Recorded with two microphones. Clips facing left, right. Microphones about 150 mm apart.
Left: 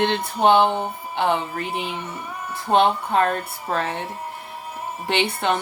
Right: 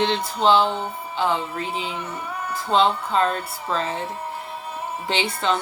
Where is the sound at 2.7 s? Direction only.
60° left (ahead or behind).